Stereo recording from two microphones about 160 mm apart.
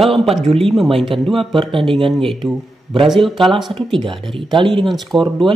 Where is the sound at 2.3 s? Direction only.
Centre (ahead or behind).